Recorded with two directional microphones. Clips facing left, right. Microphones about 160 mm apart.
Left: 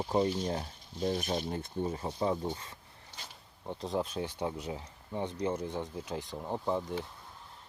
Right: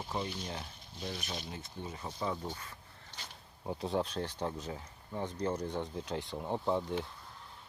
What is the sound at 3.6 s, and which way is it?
Speech, 5° right (ahead or behind).